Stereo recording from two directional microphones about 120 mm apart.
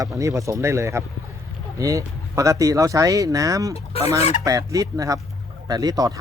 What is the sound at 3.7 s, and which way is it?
Fowl, 55° left (ahead or behind).